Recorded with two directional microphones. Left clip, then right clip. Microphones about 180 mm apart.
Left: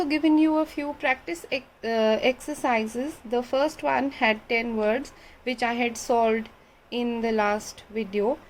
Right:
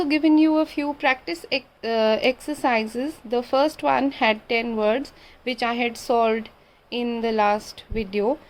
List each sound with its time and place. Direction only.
0.0 s a woman's voice: 15° right (ahead or behind)